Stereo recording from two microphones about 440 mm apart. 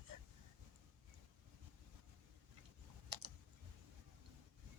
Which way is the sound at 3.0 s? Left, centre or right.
Right.